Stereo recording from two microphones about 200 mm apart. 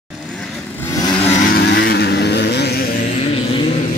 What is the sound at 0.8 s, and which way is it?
Vehicle, 15° left (ahead or behind).